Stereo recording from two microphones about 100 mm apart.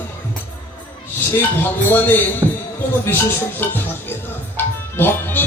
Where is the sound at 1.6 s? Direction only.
20° left (ahead or behind).